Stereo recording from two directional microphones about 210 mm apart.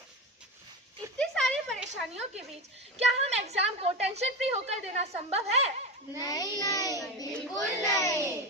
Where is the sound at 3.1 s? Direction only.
30° right (ahead or behind).